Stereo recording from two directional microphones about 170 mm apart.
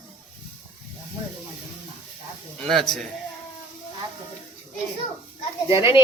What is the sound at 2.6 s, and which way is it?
Speech, 5° left (ahead or behind).